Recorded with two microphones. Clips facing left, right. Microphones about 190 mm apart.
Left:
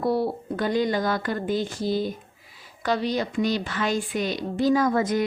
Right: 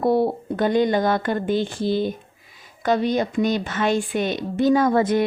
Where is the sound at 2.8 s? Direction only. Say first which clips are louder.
Right 4 dB; 50° right (ahead or behind).